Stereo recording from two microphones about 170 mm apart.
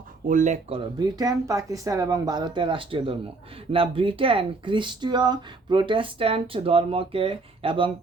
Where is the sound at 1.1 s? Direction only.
20° right (ahead or behind).